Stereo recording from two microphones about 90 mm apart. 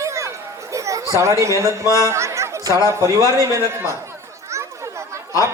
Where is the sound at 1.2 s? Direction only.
35° right (ahead or behind).